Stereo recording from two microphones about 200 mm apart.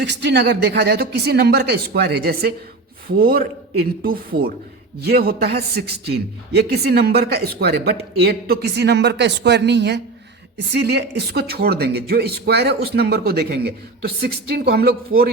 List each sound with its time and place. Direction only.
0.0 s a man's voice: 60° right (ahead or behind)